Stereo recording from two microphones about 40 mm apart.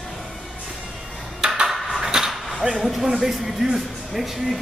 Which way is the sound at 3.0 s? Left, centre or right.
Centre.